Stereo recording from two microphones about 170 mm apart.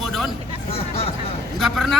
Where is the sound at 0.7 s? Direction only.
35° left (ahead or behind).